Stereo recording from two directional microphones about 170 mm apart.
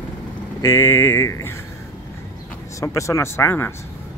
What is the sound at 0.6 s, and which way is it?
Speech, 15° left (ahead or behind).